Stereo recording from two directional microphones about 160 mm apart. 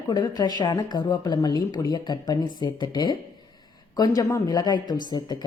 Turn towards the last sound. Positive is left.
turn(degrees=25)  # may be behind; listen again after turning